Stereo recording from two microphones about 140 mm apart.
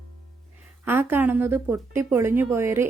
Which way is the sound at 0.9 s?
15° right (ahead or behind).